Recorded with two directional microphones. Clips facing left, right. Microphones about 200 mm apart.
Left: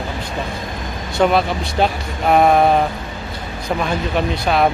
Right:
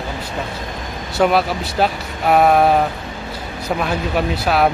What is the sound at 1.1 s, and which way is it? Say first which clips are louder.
Speech: even; 5° right (ahead or behind).